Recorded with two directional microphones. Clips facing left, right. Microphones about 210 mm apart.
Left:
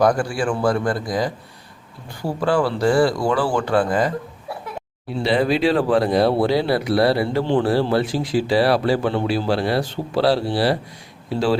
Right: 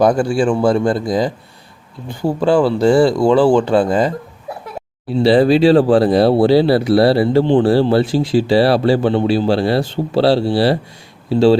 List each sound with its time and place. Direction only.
0.0 s speech: 25° right (ahead or behind)